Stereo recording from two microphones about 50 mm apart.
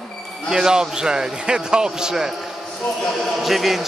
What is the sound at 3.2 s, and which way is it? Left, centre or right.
Speech, centre.